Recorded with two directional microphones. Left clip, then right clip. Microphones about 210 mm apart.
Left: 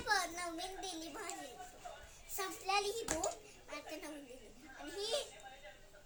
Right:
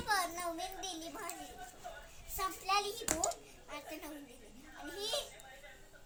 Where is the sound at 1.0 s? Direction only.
15° left (ahead or behind).